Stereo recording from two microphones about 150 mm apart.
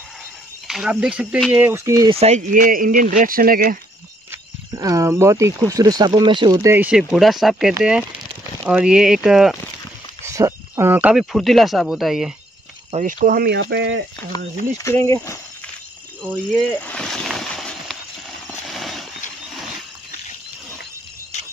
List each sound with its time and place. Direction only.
0.7 s speech: 5° right (ahead or behind); by 2.0 s 20° right (ahead or behind)
2.0 s speech: 45° right (ahead or behind)
2.5 s speech: 70° right (ahead or behind)
4.3 s speech: 20° right (ahead or behind); by 9.6 s 5° right (ahead or behind)
10.2 s speech: 20° right (ahead or behind); by 12.4 s centre (ahead or behind)
12.9 s speech: 60° right (ahead or behind); by 13.7 s 90° right
14.3 s speech: 25° left (ahead or behind)
16.3 s a sound: 10° left (ahead or behind)
18.7 s horse: centre (ahead or behind)